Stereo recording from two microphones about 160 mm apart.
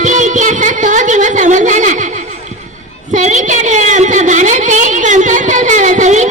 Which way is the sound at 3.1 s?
50° right (ahead or behind).